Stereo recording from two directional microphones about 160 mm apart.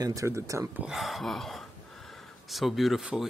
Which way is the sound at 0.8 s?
Centre (ahead or behind).